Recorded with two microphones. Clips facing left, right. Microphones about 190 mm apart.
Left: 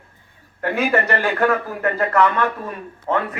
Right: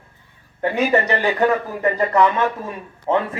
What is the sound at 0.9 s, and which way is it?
A man's voice, 20° right (ahead or behind).